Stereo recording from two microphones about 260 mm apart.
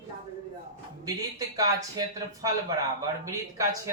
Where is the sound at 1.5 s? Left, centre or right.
Centre.